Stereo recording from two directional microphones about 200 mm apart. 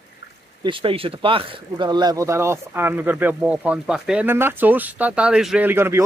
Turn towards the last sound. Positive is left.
turn(degrees=-10)  # may be behind; listen again after turning